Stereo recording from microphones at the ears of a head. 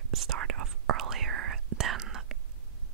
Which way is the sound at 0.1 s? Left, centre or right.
Right.